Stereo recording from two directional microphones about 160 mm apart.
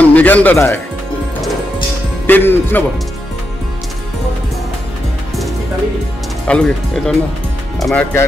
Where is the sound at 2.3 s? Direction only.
15° left (ahead or behind).